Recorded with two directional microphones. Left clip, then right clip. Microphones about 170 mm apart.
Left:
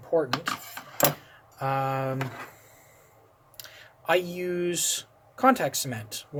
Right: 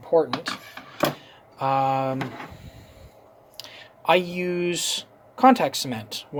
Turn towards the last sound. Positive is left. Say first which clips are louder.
# right 5 dB
turn(degrees=-25)  # may be behind; listen again after turning